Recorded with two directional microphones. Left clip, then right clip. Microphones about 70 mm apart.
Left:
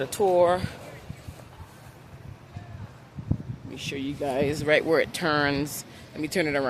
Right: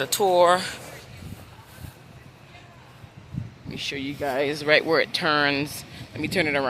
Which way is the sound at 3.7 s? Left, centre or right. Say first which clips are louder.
Right 3 dB; left.